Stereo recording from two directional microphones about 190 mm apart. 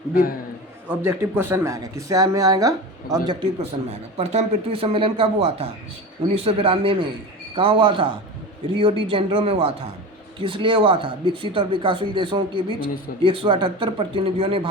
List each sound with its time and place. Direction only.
0.1 s a man's voice: 50° left (ahead or behind)
0.9 s speech: 10° right (ahead or behind)
4.2 s speech: 35° right (ahead or behind)